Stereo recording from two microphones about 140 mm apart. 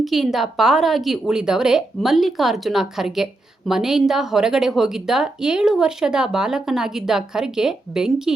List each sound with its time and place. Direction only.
0.0 s a woman's voice: centre (ahead or behind)